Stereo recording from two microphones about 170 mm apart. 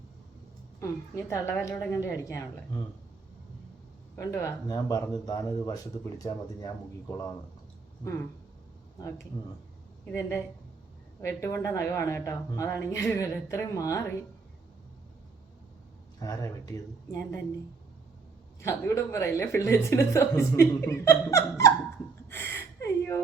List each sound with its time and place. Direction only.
0.8 s a woman's voice: 15° left (ahead or behind)
2.2 s speech: 20° left (ahead or behind)
4.1 s a woman's voice: 15° left (ahead or behind)
10.1 s a woman's voice: 15° left (ahead or behind)
16.2 s speech: 20° left (ahead or behind)
18.6 s a woman's voice: 15° left (ahead or behind)
22.3 s gasp: 15° left (ahead or behind)